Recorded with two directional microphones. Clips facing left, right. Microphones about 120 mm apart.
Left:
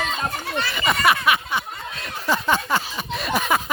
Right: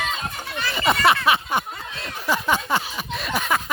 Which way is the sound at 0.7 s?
30° right (ahead or behind).